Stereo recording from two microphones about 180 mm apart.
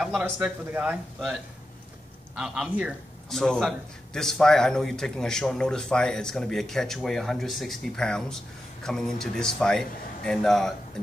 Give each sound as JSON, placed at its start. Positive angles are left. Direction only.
{"t": 0.0, "sound": "a man's voice", "side_deg": -5}